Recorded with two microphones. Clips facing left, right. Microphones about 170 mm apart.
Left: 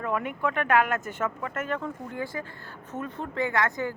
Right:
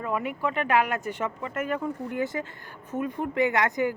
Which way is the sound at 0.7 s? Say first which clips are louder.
Left 1 dB; 45° left (ahead or behind).